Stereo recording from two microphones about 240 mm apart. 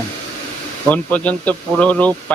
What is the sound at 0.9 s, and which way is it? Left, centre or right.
Speech, centre.